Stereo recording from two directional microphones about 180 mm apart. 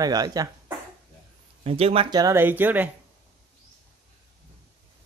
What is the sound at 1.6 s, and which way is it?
Speech, 35° right (ahead or behind).